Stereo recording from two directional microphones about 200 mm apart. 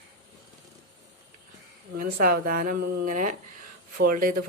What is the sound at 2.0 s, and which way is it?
Speech, 45° right (ahead or behind).